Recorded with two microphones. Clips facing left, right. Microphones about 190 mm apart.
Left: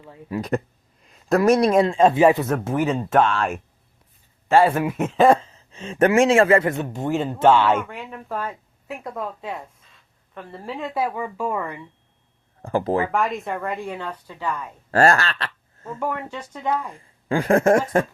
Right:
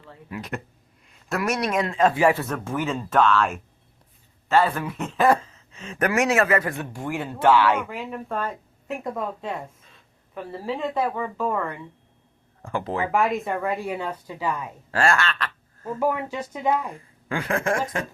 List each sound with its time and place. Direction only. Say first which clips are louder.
0.3 s a woman's voice: left 9 dB; 35° left (ahead or behind); by 2.5 s 20° left (ahead or behind)
2.5 s a woman's voice: left 5 dB; 40° left (ahead or behind)
4.9 s speech: left 4 dB; 25° left (ahead or behind)
7.9 s speech: right 2 dB; centre (ahead or behind)
8.4 s a sound: right 1 dB; 10° left (ahead or behind)
9.0 s speech: even; centre (ahead or behind)
12.6 s a woman's voice: left 6 dB; 40° left (ahead or behind)
13.1 s speech: right 1 dB; centre (ahead or behind)
14.8 s speech: left 5 dB; 40° left (ahead or behind)
16.0 s speech: right 3 dB; 10° right (ahead or behind)
17.2 s a woman's voice: left 8 dB; 35° left (ahead or behind)